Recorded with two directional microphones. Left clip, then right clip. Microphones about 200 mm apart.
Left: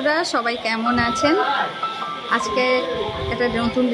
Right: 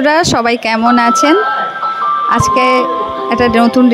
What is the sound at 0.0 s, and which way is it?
A woman's voice, 45° right (ahead or behind).